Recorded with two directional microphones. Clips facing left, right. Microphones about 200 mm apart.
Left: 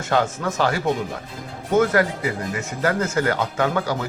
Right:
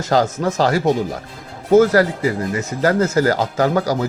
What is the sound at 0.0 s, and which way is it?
Speech, 40° right (ahead or behind).